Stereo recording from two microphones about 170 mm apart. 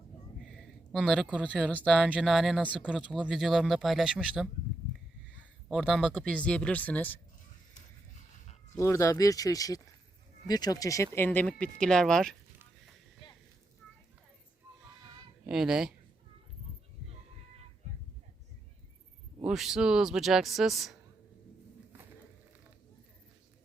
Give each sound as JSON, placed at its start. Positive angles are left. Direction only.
{"t": 0.3, "sound": "speech", "side_deg": -5}
{"t": 2.0, "sound": "speech", "side_deg": -5}
{"t": 5.6, "sound": "speech", "side_deg": 0}
{"t": 8.8, "sound": "speech", "side_deg": 15}
{"t": 15.4, "sound": "speech", "side_deg": -5}
{"t": 19.5, "sound": "speech", "side_deg": 0}